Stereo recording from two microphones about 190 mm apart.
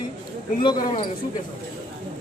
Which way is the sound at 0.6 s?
25° left (ahead or behind).